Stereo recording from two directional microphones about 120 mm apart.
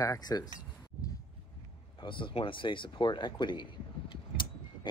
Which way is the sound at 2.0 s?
45° left (ahead or behind).